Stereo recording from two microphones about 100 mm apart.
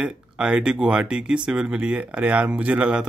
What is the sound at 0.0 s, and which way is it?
Speech, 10° right (ahead or behind).